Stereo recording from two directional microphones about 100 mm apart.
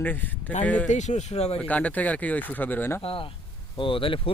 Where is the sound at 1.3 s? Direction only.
90° left.